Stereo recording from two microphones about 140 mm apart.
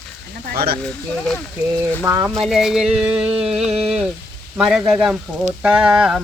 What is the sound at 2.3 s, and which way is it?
Speech, centre (ahead or behind).